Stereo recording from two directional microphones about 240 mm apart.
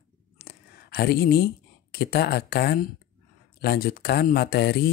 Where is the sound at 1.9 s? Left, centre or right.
Left.